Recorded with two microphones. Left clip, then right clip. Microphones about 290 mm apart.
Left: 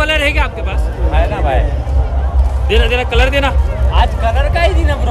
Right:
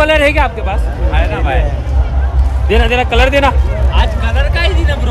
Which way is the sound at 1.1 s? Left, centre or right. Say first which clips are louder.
Left 1 dB; left.